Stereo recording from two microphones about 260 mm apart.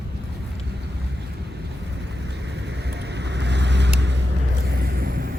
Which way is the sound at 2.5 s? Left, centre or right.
Right.